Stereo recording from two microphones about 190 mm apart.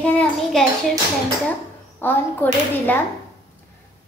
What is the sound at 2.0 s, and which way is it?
A woman's voice, 10° left (ahead or behind).